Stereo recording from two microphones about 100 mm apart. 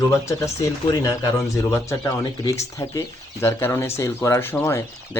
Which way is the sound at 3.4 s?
25° left (ahead or behind).